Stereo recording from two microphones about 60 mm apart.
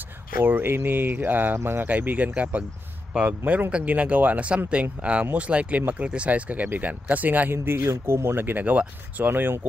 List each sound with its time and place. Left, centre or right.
0.4 s speech: right
1.9 s speech: right
7.5 s speech: right